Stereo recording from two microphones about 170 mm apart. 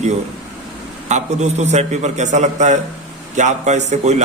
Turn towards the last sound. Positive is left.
turn(degrees=-40)  # may be behind; listen again after turning